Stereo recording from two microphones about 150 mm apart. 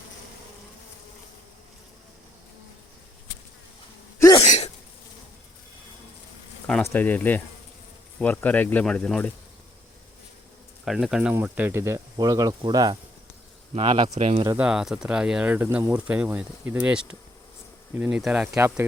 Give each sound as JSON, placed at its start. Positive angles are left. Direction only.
{"t": 4.4, "sound": "sneeze", "side_deg": 45}
{"t": 6.8, "sound": "speech", "side_deg": 15}
{"t": 10.8, "sound": "speech", "side_deg": -5}
{"t": 14.1, "sound": "speech", "side_deg": -40}
{"t": 14.5, "sound": "speech", "side_deg": -5}
{"t": 18.5, "sound": "speech", "side_deg": -15}